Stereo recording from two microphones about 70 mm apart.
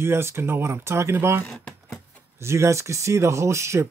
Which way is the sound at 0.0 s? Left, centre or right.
Right.